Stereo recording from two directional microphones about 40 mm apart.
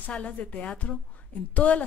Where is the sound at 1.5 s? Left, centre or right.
Left.